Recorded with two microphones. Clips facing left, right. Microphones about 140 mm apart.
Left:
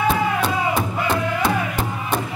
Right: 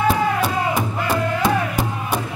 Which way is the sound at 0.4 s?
10° right (ahead or behind).